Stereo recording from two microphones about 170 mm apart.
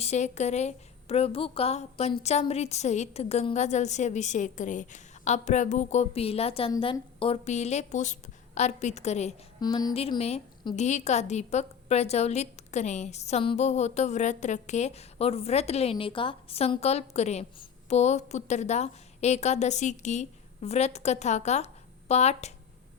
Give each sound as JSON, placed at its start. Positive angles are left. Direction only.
{"t": 0.0, "sound": "a woman's voice", "side_deg": 40}
{"t": 9.6, "sound": "speech", "side_deg": 25}
{"t": 9.9, "sound": "a woman's voice", "side_deg": 35}